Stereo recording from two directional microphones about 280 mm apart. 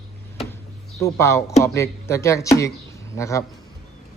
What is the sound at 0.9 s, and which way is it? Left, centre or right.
A man's voice, centre.